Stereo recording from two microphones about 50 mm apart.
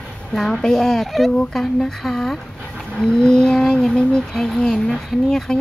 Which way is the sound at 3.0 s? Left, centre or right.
Centre.